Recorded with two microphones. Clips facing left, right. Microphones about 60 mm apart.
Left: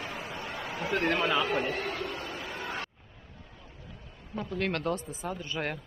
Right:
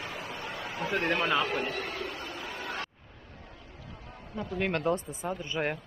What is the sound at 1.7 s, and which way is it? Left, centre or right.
Speech, left.